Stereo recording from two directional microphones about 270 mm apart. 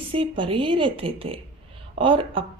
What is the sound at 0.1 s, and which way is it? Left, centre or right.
Speech, centre.